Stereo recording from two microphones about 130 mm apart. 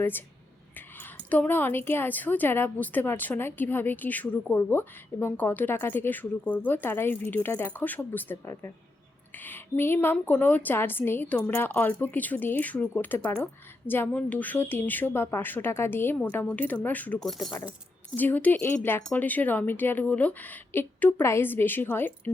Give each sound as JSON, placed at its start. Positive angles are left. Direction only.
{"t": 1.3, "sound": "a woman's voice", "side_deg": 15}
{"t": 18.2, "sound": "a woman's voice", "side_deg": 15}